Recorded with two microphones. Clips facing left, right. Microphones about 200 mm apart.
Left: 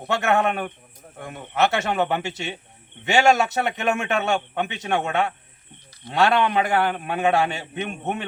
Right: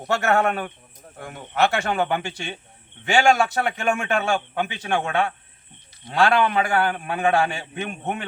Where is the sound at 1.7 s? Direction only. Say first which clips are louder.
Even; 20° left (ahead or behind).